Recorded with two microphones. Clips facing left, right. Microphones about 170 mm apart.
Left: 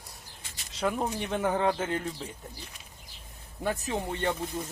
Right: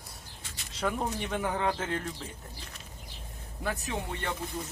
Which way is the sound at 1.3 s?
20° left (ahead or behind).